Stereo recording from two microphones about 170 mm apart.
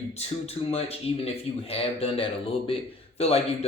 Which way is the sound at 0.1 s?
35° left (ahead or behind).